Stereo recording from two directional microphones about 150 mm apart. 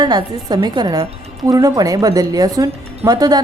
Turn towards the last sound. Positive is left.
turn(degrees=-25)  # may be behind; listen again after turning